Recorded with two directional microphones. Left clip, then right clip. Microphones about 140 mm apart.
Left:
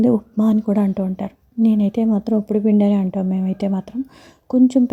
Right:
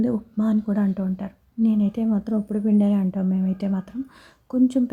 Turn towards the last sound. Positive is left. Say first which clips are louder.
# left 6 dB
turn(degrees=25)  # may be behind; listen again after turning